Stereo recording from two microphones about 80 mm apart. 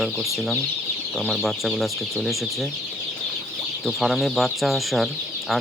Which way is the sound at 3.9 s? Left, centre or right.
Centre.